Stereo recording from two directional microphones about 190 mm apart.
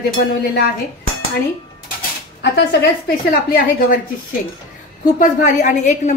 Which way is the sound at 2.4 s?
60° left (ahead or behind).